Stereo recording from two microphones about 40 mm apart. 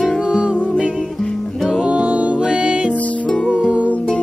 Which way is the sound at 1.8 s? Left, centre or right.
Right.